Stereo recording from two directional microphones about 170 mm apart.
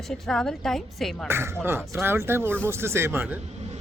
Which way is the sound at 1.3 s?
15° right (ahead or behind).